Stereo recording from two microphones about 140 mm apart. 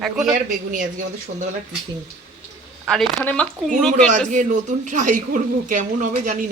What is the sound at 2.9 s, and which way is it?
Speech, centre (ahead or behind).